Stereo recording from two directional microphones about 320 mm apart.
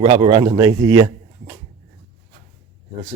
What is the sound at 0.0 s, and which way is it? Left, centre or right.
Speech, centre.